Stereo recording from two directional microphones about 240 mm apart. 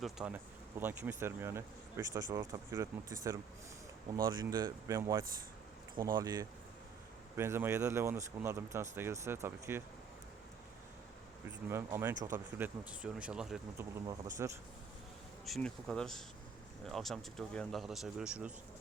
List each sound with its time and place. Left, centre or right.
0.0 s speech: centre
11.7 s speech: centre
15.4 s speech: centre